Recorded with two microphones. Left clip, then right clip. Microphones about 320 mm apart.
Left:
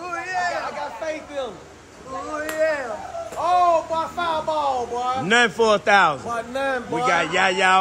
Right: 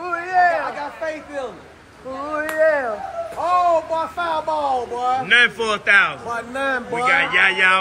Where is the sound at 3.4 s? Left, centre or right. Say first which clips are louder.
Right 1 dB; right.